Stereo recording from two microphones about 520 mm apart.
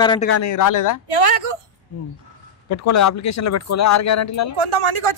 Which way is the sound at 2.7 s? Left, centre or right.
Left.